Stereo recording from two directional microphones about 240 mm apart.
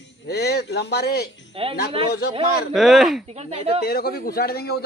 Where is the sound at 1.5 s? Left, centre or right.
Right.